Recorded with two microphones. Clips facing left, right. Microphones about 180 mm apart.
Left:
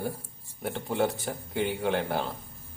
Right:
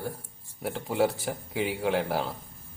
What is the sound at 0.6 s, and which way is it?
Speech, 5° right (ahead or behind).